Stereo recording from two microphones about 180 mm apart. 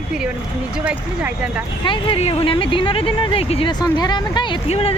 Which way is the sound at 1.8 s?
30° left (ahead or behind).